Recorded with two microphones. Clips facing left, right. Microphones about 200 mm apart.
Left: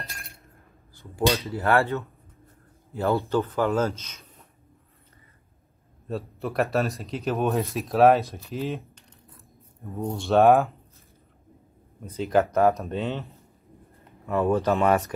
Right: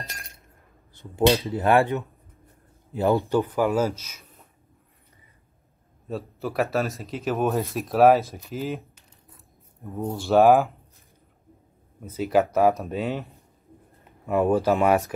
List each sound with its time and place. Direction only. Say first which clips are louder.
1.0 s speech: right 4 dB; 25° right (ahead or behind)
6.0 s speech: even; centre (ahead or behind)
12.0 s speech: right 1 dB; 5° right (ahead or behind)
14.2 s speech: right 2 dB; 15° right (ahead or behind)